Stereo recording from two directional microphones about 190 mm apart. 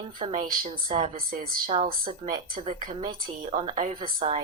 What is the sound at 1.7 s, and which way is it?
Speech, 30° right (ahead or behind).